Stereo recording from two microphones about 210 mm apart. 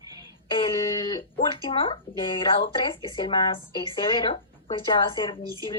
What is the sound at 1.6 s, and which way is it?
Speech, 25° left (ahead or behind).